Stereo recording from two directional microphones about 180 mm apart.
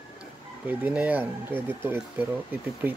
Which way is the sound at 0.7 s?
10° right (ahead or behind).